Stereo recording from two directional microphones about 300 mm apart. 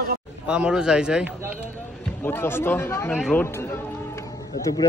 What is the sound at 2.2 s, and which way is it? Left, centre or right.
Speech, centre.